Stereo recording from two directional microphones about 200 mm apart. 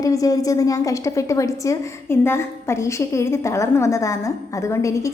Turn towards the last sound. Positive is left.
turn(degrees=15)  # may be behind; listen again after turning